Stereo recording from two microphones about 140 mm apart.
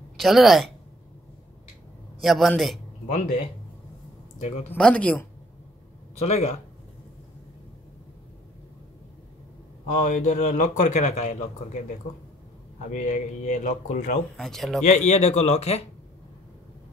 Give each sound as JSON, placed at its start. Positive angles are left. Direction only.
{"t": 0.2, "sound": "a man's voice", "side_deg": 0}
{"t": 2.2, "sound": "a man's voice", "side_deg": 0}
{"t": 4.4, "sound": "speech", "side_deg": 50}
{"t": 4.6, "sound": "speech", "side_deg": 10}
{"t": 6.2, "sound": "speech", "side_deg": 50}
{"t": 9.8, "sound": "a man's voice", "side_deg": 60}
{"t": 12.9, "sound": "a man's voice", "side_deg": 65}
{"t": 14.3, "sound": "a man's voice", "side_deg": 5}
{"t": 14.8, "sound": "speech", "side_deg": 55}